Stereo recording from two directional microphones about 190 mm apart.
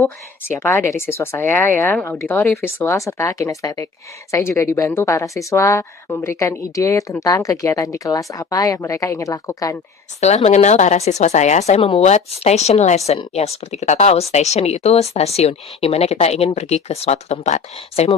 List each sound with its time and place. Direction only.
0.6 s speech: 10° left (ahead or behind)
10.2 s speech: 35° left (ahead or behind)